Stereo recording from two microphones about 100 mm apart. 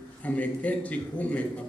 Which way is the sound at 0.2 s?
15° left (ahead or behind).